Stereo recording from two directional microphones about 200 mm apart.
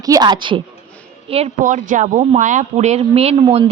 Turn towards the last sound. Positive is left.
turn(degrees=-25)  # may be behind; listen again after turning